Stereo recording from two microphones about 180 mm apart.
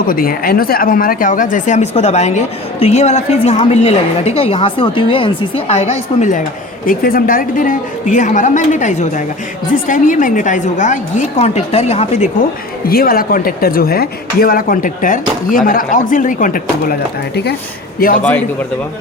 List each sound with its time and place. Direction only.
0.1 s a woman's voice: 55° left (ahead or behind)
6.8 s speech: 50° left (ahead or behind)
12.8 s speech: 55° left (ahead or behind)
18.2 s a man's voice: 10° left (ahead or behind)